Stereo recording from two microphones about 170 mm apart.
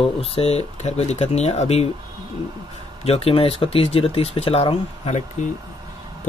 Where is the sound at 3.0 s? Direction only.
35° left (ahead or behind).